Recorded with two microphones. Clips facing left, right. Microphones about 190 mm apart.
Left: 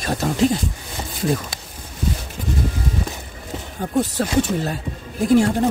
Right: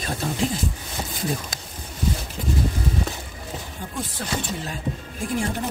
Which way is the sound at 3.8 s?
50° left (ahead or behind).